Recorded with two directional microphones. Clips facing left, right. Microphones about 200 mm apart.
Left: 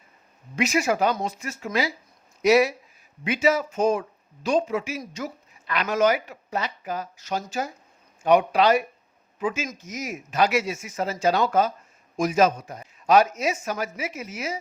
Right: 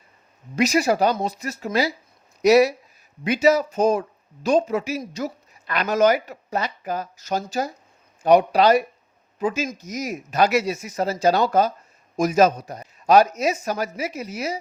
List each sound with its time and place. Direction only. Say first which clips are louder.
0.5 s speech: right 4 dB; 40° right (ahead or behind)